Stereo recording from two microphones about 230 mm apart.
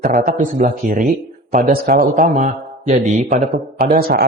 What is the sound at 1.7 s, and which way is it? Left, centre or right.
A man's voice, right.